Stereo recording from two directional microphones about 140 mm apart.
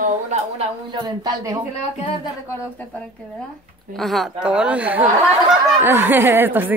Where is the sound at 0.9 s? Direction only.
30° right (ahead or behind).